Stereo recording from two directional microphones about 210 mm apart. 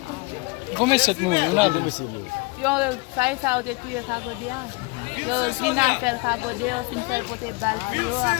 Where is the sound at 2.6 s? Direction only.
5° right (ahead or behind).